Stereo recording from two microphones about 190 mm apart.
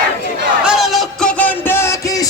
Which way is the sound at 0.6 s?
Centre (ahead or behind).